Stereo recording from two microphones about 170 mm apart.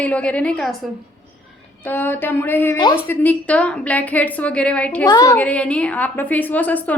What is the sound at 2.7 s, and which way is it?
Speech, 25° left (ahead or behind).